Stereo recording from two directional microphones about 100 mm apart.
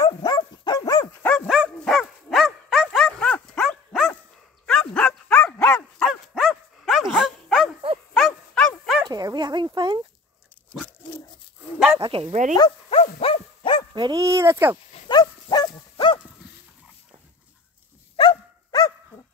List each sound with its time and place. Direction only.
0.0 s dog: 40° left (ahead or behind)
1.2 s dog: 20° left (ahead or behind)
1.5 s dog: 5° right (ahead or behind)
3.1 s dog: 10° left (ahead or behind)
6.0 s dog: 5° right (ahead or behind)
9.0 s bow-wow: 45° right (ahead or behind)
9.8 s dog: 50° right (ahead or behind)
12.0 s bow-wow: 70° right (ahead or behind)
12.9 s dog: 70° left (ahead or behind)
13.9 s speech: 45° right (ahead or behind); by 14.8 s 25° right (ahead or behind)
15.0 s dog: 45° left (ahead or behind)
18.1 s dog: 50° left (ahead or behind)